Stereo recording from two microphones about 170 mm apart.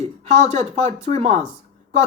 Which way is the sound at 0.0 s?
40° right (ahead or behind).